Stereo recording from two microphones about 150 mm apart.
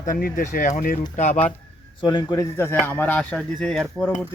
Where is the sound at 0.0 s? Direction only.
75° left (ahead or behind).